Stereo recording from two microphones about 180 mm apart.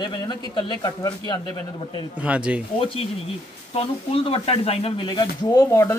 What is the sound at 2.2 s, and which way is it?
Speech, 5° right (ahead or behind).